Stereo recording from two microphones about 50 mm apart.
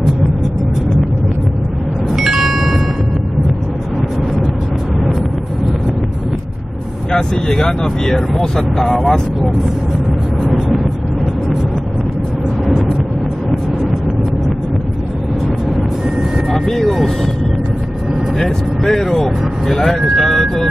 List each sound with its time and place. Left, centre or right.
2.1 s a sound: centre
7.2 s speech: centre
16.4 s vehicle: centre
18.4 s speech: centre